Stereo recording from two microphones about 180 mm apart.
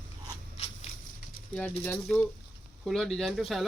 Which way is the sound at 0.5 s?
35° left (ahead or behind).